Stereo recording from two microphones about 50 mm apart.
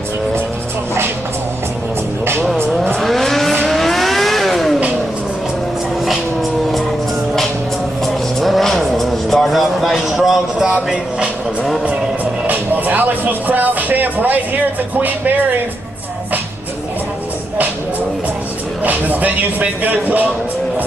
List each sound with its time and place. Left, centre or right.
3.0 s vehicle: centre
8.0 s vehicle: centre
12.4 s music: right
18.9 s music: right